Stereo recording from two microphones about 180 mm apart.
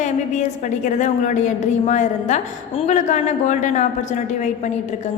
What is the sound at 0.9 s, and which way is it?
A woman's voice, 40° left (ahead or behind).